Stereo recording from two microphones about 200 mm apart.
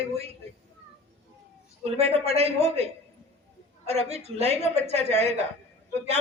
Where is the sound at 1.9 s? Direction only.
30° right (ahead or behind).